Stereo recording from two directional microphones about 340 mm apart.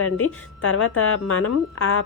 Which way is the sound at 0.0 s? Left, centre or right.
Left.